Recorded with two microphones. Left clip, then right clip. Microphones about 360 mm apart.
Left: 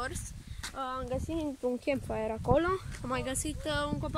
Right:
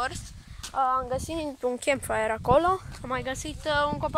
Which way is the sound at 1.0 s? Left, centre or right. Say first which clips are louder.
Right 5 dB; right.